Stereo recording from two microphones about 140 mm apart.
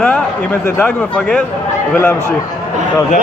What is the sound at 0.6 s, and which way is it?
Speech, 15° left (ahead or behind).